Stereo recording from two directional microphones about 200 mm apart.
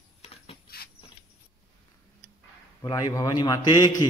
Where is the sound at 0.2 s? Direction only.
30° left (ahead or behind).